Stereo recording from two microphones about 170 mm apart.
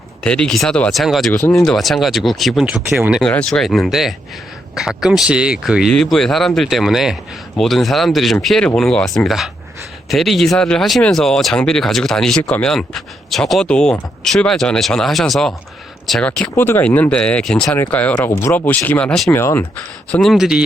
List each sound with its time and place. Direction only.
0.2 s speech: 5° left (ahead or behind)
1.3 s speech: 15° left (ahead or behind)
1.6 s speech: centre (ahead or behind)
16.6 s speech: 10° left (ahead or behind)
20.1 s speech: centre (ahead or behind)